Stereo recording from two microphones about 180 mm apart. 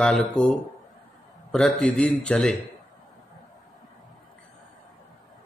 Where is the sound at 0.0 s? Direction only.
5° left (ahead or behind).